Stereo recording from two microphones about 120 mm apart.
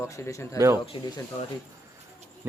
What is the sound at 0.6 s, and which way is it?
Speech, 25° right (ahead or behind).